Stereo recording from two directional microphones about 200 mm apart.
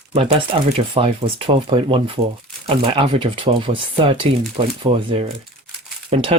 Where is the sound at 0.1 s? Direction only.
30° right (ahead or behind).